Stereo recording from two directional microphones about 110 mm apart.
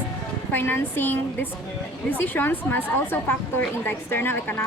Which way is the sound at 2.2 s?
20° left (ahead or behind).